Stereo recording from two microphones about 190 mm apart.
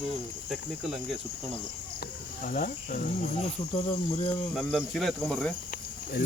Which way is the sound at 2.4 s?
45° left (ahead or behind).